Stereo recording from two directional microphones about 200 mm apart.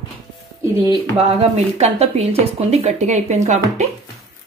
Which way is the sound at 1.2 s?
30° right (ahead or behind).